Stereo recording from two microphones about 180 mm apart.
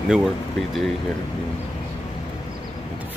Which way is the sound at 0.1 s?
Centre (ahead or behind).